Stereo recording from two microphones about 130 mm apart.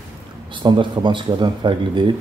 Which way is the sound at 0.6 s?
40° right (ahead or behind).